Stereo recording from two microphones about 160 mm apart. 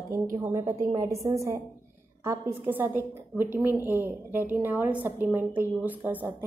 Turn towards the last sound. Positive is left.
turn(degrees=-10)  # may be behind; listen again after turning